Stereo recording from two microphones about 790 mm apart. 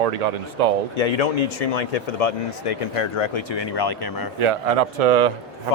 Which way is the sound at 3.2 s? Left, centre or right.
Left.